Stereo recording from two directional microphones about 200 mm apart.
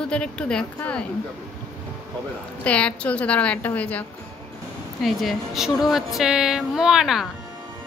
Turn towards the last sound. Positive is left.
turn(degrees=0)  # may be behind; listen again after turning